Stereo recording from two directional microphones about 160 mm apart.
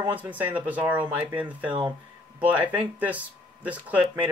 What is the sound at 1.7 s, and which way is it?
Speech, 25° right (ahead or behind).